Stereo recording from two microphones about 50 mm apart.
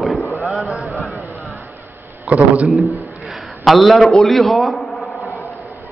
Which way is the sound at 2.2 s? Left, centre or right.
Right.